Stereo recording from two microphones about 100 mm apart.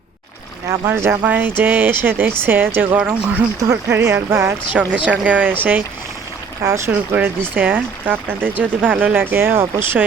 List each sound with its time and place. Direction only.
0.7 s speech: 25° right (ahead or behind)
3.6 s speech: 30° right (ahead or behind)
4.7 s speech: 15° right (ahead or behind)
6.6 s speech: 30° right (ahead or behind)